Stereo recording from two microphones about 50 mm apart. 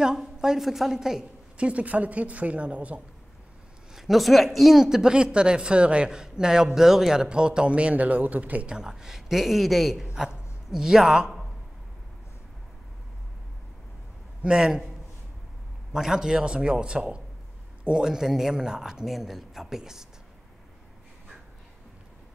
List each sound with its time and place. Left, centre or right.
0.0 s speech: centre
1.6 s a woman's voice: right
3.9 s speech: centre; by 8.7 s right
8.7 s speech: centre
14.4 s speech: centre
15.9 s speech: centre
19.0 s speech: centre